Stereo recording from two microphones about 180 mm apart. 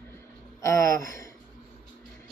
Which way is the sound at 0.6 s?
15° left (ahead or behind).